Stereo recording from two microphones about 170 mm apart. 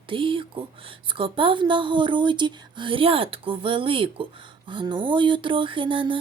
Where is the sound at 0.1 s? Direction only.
30° right (ahead or behind).